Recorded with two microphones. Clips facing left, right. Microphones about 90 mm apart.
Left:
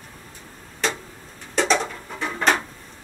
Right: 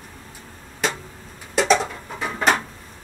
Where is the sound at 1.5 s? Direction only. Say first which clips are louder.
Right 2 dB; 5° right (ahead or behind).